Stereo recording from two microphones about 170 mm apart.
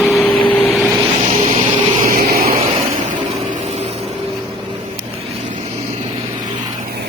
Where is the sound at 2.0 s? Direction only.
60° right (ahead or behind).